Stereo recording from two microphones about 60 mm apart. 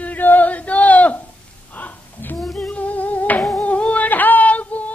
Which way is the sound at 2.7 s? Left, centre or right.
Left.